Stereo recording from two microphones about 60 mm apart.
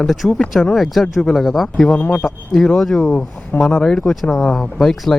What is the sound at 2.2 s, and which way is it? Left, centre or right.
Speech, centre.